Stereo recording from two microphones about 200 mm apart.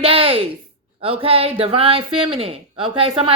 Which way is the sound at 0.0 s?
25° right (ahead or behind).